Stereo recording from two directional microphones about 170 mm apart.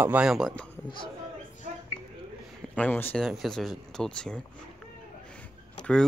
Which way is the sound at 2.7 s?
10° left (ahead or behind).